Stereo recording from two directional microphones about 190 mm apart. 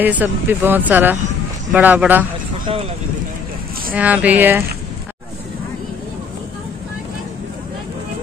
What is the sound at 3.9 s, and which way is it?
Speech, 10° right (ahead or behind).